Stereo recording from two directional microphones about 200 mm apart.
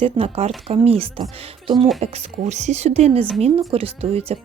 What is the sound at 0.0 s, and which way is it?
Speech, 30° right (ahead or behind).